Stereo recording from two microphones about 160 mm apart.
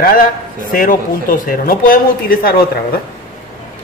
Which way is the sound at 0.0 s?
60° left (ahead or behind).